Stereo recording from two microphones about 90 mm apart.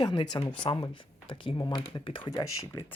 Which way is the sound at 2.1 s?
60° left (ahead or behind).